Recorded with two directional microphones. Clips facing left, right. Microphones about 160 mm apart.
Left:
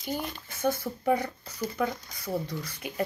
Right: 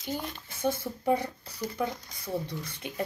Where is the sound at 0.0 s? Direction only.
15° left (ahead or behind).